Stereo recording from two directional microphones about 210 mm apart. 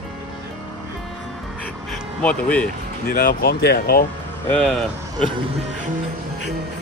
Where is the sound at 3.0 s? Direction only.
45° left (ahead or behind).